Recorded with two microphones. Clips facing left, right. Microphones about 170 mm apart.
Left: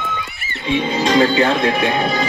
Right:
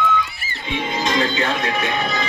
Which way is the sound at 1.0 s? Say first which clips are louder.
Left 7 dB; 30° left (ahead or behind).